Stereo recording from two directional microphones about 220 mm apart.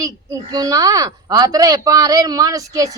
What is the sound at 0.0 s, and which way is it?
Speech, 15° right (ahead or behind).